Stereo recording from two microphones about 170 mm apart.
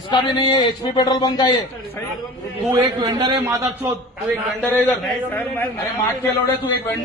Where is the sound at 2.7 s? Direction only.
20° right (ahead or behind).